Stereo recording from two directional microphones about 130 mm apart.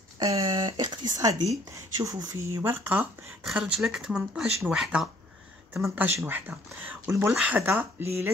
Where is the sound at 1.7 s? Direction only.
25° right (ahead or behind).